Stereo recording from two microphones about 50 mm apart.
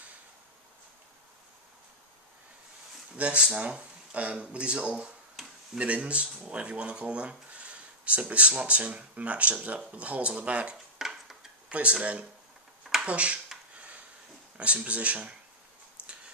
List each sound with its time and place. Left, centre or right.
3.2 s speech: right
5.4 s tick-tock: centre
5.8 s speech: right
11.0 s a sound: centre
11.7 s speech: right
14.8 s speech: right
16.0 s tick-tock: right